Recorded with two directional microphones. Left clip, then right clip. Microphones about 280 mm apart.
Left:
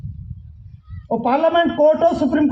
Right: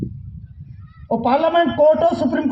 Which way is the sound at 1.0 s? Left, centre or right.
Right.